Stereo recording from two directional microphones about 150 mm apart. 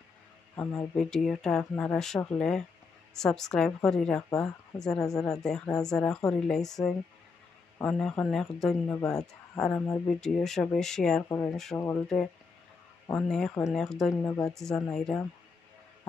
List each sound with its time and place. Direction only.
0.6 s speech: 15° left (ahead or behind)
0.9 s speech: 5° left (ahead or behind)
11.2 s speech: 15° left (ahead or behind)
13.0 s speech: 5° left (ahead or behind)
14.2 s speech: 20° left (ahead or behind)
14.5 s speech: 5° left (ahead or behind)